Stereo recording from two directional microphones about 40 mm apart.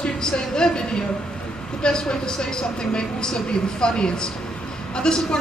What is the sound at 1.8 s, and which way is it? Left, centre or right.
A woman's voice, centre.